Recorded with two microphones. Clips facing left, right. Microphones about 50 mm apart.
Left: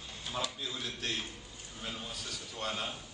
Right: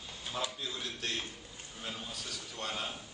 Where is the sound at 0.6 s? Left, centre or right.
Centre.